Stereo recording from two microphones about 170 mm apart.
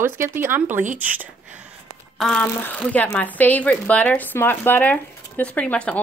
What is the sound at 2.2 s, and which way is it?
Speech, 5° left (ahead or behind).